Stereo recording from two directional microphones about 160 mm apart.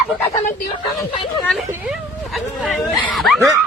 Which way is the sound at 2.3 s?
10° left (ahead or behind).